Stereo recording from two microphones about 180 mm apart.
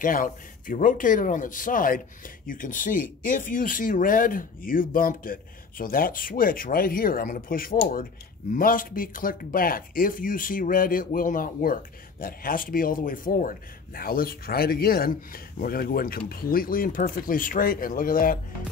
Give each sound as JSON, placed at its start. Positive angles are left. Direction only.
{"t": 0.0, "sound": "speech", "side_deg": 50}